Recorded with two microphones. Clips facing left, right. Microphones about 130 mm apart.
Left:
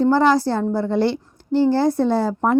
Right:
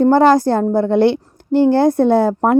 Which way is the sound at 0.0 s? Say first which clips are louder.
Right 5 dB; 50° right (ahead or behind).